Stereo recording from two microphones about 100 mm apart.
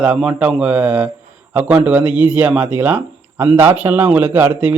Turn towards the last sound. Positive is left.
turn(degrees=-20)  # may be behind; listen again after turning